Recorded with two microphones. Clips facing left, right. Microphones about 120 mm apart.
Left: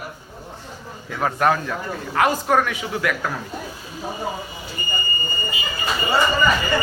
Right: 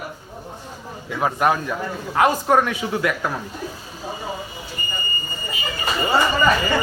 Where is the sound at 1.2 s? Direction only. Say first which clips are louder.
Even; 10° right (ahead or behind).